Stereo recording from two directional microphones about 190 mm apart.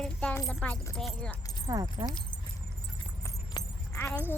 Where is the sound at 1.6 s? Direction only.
20° right (ahead or behind).